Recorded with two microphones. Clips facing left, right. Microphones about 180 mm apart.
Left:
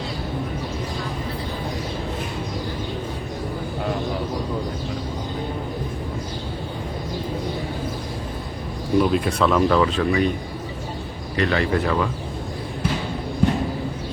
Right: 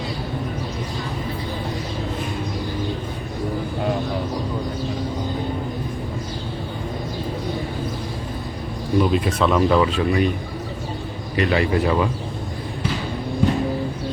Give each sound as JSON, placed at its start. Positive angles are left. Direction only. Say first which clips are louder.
{"t": 9.0, "sound": "speech", "louder": "even", "side_deg": 0}
{"t": 11.3, "sound": "speech", "louder": "right 2 dB", "side_deg": -15}